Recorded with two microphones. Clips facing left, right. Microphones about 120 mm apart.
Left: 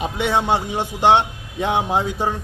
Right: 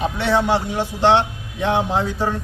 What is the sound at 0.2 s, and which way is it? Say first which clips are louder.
A man's voice: even; 15° left (ahead or behind).